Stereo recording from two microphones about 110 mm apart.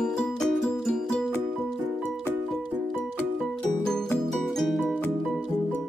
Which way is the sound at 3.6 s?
5° left (ahead or behind).